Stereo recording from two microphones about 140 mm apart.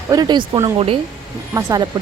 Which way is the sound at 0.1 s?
30° right (ahead or behind).